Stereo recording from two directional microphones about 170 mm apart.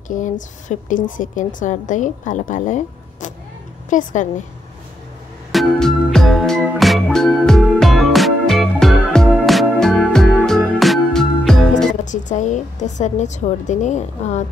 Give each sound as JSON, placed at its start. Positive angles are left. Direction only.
{"t": 0.1, "sound": "a woman's voice", "side_deg": 50}
{"t": 5.5, "sound": "music", "side_deg": 0}
{"t": 12.0, "sound": "a woman's voice", "side_deg": 45}